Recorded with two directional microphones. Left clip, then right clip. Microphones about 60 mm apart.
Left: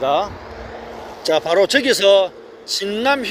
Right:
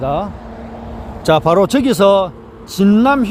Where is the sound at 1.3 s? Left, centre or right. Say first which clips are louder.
Right 3 dB; right.